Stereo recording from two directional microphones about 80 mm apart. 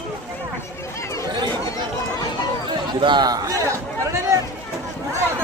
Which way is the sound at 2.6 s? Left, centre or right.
Right.